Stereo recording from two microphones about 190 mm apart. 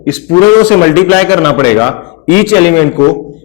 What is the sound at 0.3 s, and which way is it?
Speech, 25° left (ahead or behind).